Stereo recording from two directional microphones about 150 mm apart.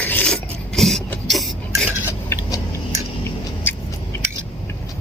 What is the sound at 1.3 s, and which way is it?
Stir, centre (ahead or behind).